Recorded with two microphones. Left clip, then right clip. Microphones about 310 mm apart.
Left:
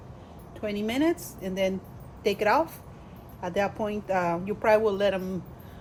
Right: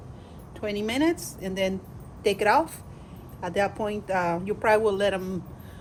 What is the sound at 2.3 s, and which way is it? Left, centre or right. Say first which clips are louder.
Speech: right 2 dB; right.